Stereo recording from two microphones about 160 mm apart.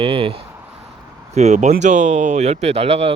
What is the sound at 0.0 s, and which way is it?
Speech, 35° right (ahead or behind).